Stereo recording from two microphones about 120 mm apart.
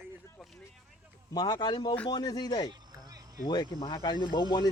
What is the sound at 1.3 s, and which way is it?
Speech, 30° left (ahead or behind).